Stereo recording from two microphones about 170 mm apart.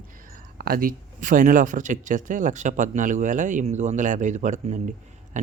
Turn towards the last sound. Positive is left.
turn(degrees=-45)  # may be behind; listen again after turning